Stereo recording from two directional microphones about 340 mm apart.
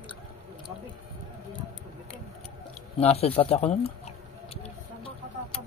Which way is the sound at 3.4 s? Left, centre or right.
Centre.